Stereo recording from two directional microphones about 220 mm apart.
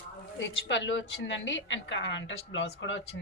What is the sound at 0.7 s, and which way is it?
A woman's voice, 55° left (ahead or behind).